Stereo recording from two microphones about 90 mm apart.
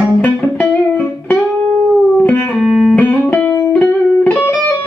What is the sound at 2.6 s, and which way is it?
Music, 5° left (ahead or behind).